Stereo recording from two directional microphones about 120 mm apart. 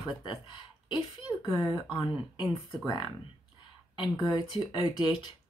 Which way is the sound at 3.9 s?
40° left (ahead or behind).